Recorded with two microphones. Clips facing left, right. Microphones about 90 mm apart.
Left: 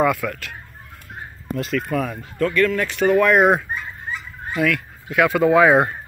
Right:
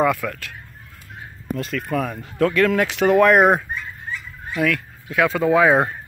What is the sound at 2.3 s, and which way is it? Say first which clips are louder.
Speech: right 2 dB; 90° right.